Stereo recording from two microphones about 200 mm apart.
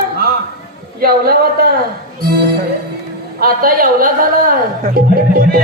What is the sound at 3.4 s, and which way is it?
A man's voice, 45° right (ahead or behind).